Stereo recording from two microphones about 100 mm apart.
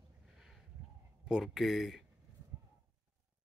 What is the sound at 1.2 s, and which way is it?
Speech, 5° right (ahead or behind).